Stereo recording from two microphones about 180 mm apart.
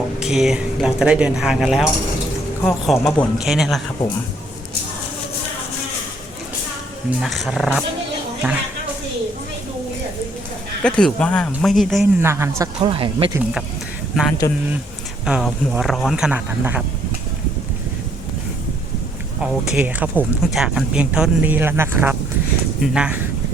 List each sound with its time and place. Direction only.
0.2 s speech: 5° right (ahead or behind)
7.2 s speech: centre (ahead or behind)
8.4 s speech: 10° right (ahead or behind)
10.8 s speech: 5° left (ahead or behind)
12.2 s speech: 15° right (ahead or behind)
12.8 s speech: 30° right (ahead or behind)
14.4 s speech: 20° left (ahead or behind)
15.2 s speech: 5° right (ahead or behind)
19.4 s speech: 5° right (ahead or behind)